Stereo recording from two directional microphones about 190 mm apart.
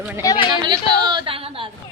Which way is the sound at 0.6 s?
25° right (ahead or behind).